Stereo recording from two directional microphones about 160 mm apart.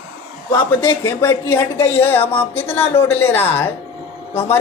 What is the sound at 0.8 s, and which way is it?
Speech, 25° left (ahead or behind).